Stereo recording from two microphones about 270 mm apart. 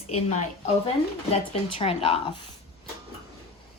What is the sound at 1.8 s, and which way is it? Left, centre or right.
Speech, left.